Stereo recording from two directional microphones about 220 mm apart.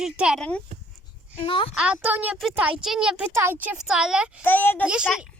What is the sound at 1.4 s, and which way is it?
Speech, 25° left (ahead or behind).